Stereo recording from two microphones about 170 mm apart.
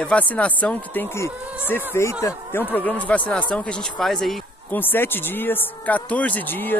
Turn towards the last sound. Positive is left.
turn(degrees=10)  # may be behind; listen again after turning